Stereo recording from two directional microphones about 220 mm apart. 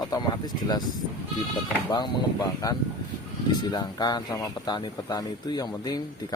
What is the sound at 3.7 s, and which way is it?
Speech, 20° left (ahead or behind).